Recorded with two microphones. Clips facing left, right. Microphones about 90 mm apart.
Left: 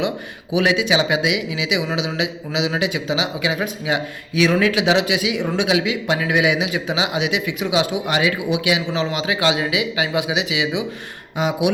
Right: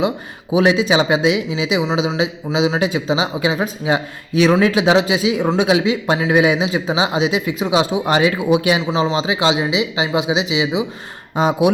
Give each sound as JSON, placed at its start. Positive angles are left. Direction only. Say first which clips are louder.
{"t": 0.5, "sound": "speech", "louder": "right 4 dB", "side_deg": -30}
{"t": 8.9, "sound": "speech", "louder": "right 4 dB", "side_deg": -25}